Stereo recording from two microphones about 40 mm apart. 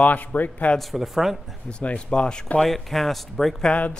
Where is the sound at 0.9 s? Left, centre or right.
Centre.